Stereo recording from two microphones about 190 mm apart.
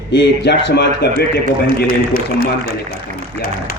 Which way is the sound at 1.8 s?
50° left (ahead or behind).